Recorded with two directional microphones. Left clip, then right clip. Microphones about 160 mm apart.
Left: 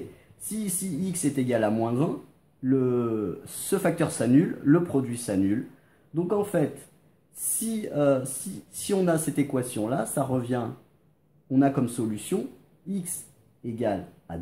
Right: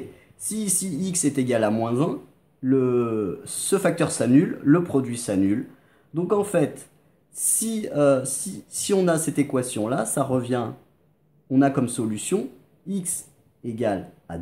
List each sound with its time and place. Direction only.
0.5 s speech: 15° right (ahead or behind)
13.7 s speech: 20° right (ahead or behind)